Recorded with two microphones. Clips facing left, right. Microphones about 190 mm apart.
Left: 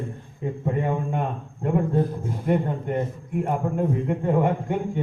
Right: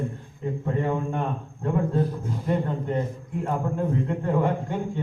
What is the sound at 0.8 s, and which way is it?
Speech, 20° left (ahead or behind).